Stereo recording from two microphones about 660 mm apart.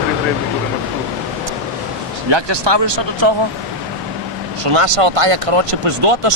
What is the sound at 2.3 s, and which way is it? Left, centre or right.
Speech, right.